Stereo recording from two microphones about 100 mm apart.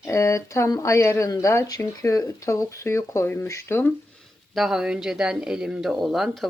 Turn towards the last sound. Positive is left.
turn(degrees=0)  # may be behind; listen again after turning